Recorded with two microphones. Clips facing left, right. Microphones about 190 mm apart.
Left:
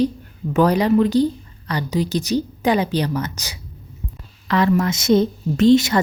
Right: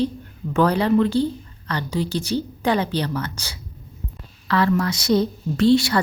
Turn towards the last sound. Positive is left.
turn(degrees=20)  # may be behind; listen again after turning